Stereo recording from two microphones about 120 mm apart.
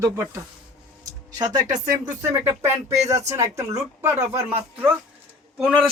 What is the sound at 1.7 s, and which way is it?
Speech, 25° right (ahead or behind).